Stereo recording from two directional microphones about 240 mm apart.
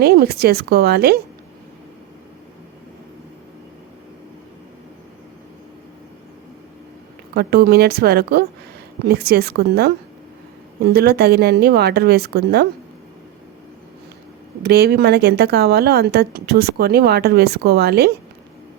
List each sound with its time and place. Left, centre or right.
0.0 s a woman's voice: right
7.3 s a woman's voice: right
14.6 s a woman's voice: right